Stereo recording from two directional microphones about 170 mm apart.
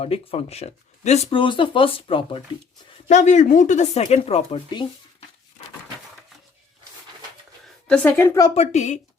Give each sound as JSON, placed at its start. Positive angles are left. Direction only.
{"t": 0.0, "sound": "speech", "side_deg": 35}
{"t": 3.1, "sound": "speech", "side_deg": 45}
{"t": 7.9, "sound": "a woman's voice", "side_deg": 10}
{"t": 8.5, "sound": "speech", "side_deg": 40}